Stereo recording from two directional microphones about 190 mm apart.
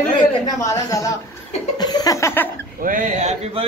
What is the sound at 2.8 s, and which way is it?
Speech, 45° right (ahead or behind).